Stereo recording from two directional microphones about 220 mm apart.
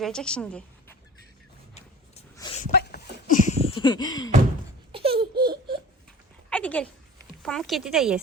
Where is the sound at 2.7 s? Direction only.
40° left (ahead or behind).